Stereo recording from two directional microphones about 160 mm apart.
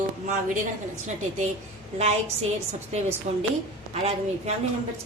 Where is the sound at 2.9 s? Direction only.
40° right (ahead or behind).